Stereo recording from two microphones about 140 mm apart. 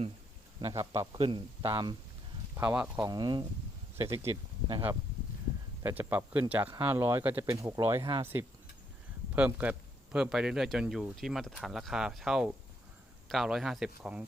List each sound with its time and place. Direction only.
0.6 s a man's voice: 20° right (ahead or behind)
1.2 s speech: 40° right (ahead or behind)
2.6 s speech: 10° right (ahead or behind)
3.1 s speech: 30° right (ahead or behind)
5.8 s a man's voice: 10° right (ahead or behind)